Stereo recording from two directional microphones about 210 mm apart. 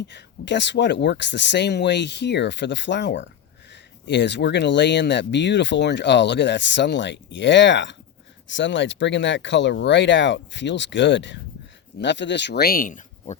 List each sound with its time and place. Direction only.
0.1 s speech: 55° left (ahead or behind); by 13.3 s 40° left (ahead or behind)